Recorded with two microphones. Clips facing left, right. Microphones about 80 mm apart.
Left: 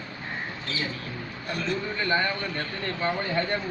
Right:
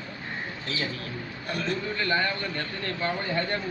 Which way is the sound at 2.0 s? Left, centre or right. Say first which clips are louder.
Left 1 dB; centre.